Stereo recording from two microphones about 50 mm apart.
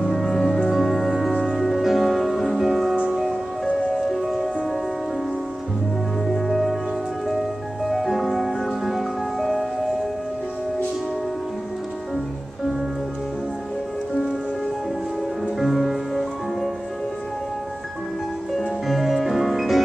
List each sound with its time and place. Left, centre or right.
0.0 s music: centre
6.2 s music: centre
15.6 s music: centre
18.5 s music: centre